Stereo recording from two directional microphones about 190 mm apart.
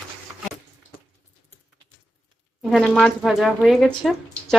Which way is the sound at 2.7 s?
Centre (ahead or behind).